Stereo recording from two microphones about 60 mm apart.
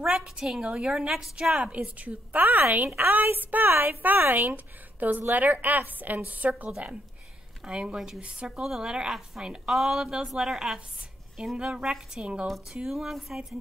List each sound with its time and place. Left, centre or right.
0.0 s a sound: centre
0.6 s a woman's voice: centre
1.5 s a woman's voice: right
7.6 s a woman's voice: centre
12.9 s a woman's voice: centre